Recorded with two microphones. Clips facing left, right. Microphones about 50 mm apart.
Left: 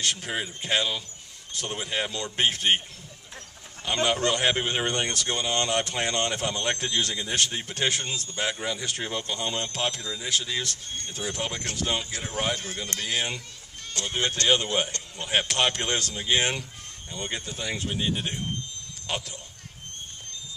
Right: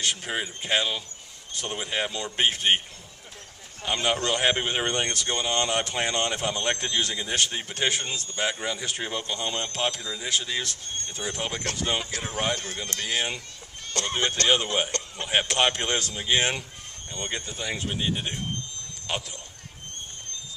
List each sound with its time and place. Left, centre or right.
0.0 s speech: centre
3.8 s speech: centre
14.0 s speech: right
14.5 s speech: centre
14.9 s speech: right
15.2 s speech: centre